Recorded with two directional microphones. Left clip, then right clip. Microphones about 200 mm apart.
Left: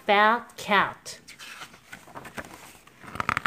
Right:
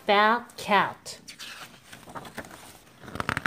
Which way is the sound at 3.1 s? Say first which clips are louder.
Left 3 dB; 30° left (ahead or behind).